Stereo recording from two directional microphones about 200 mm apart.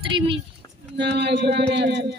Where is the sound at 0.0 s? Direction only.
25° right (ahead or behind).